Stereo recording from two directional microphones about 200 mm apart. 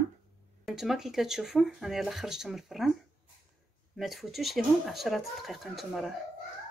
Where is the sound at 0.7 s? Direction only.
Centre (ahead or behind).